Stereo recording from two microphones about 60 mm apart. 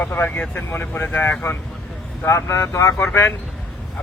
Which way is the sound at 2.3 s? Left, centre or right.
Left.